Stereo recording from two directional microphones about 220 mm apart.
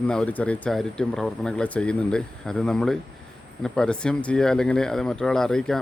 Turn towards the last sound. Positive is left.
turn(degrees=0)  # may be behind; listen again after turning